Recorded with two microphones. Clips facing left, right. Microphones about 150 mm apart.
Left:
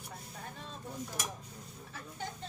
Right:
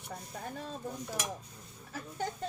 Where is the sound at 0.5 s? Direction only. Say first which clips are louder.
Right 6 dB; 45° right (ahead or behind).